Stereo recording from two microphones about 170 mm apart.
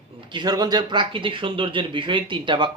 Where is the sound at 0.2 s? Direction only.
30° right (ahead or behind).